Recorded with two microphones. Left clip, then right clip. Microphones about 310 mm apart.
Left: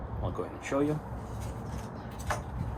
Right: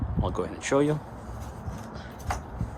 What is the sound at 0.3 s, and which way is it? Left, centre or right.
Speech, right.